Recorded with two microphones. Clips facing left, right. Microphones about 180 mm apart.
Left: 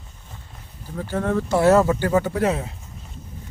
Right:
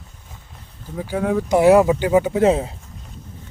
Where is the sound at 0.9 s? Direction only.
10° right (ahead or behind); by 2.7 s 30° right (ahead or behind).